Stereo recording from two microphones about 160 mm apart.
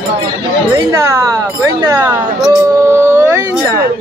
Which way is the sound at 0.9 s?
20° right (ahead or behind).